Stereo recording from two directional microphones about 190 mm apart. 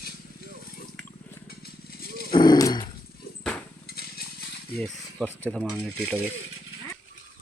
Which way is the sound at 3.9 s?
55° left (ahead or behind).